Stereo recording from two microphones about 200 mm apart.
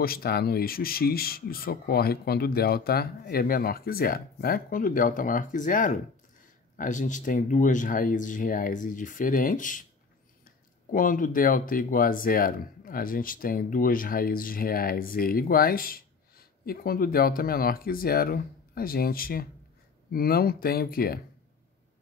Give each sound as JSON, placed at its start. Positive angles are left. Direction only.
{"t": 0.0, "sound": "speech", "side_deg": 50}